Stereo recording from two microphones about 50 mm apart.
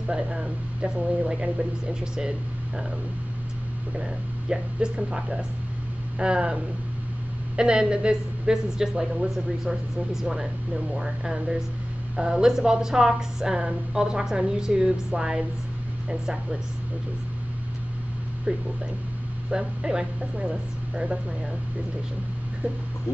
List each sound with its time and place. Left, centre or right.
0.0 s a woman's voice: centre
4.0 s a woman's voice: centre
19.5 s a woman's voice: centre